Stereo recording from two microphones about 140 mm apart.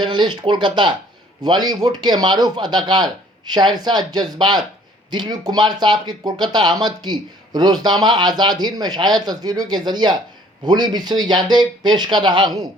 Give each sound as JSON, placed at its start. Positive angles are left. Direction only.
{"t": 0.0, "sound": "speech", "side_deg": -35}